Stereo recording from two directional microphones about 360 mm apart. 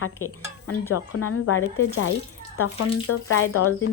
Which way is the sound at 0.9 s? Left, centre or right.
Left.